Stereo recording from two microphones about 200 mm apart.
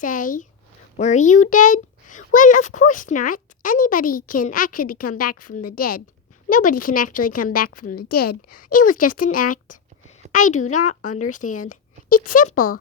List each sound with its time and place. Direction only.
0.0 s a woman's voice: 40° left (ahead or behind)